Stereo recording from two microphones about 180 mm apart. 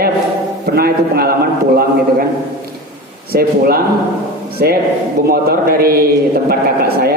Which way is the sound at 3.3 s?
55° right (ahead or behind).